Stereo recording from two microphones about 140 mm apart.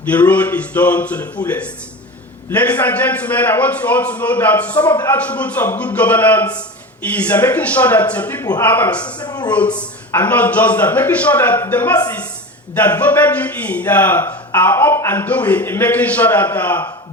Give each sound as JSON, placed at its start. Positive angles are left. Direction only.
{"t": 0.0, "sound": "a man's voice", "side_deg": 10}
{"t": 9.0, "sound": "speech", "side_deg": 30}
{"t": 10.1, "sound": "a man's voice", "side_deg": 15}